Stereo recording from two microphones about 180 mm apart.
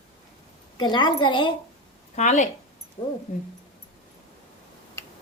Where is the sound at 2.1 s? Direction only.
40° left (ahead or behind).